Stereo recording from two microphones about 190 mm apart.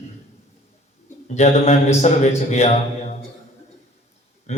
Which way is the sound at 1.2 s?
35° left (ahead or behind).